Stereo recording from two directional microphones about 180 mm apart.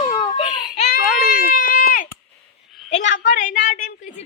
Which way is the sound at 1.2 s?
50° left (ahead or behind).